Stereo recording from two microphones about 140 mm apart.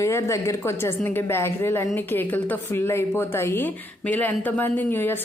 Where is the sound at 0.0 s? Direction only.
20° left (ahead or behind).